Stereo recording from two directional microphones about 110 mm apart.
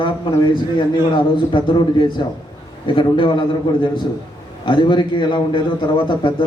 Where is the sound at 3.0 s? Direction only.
50° left (ahead or behind).